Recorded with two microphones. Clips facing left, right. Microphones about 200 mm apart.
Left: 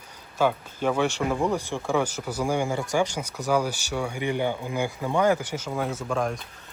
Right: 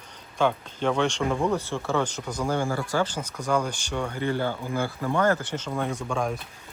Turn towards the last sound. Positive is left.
turn(degrees=0)  # may be behind; listen again after turning